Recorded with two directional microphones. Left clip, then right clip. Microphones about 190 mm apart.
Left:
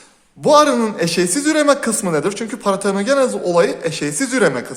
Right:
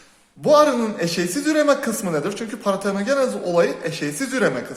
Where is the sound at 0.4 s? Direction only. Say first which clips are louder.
Left 3 dB; 35° left (ahead or behind).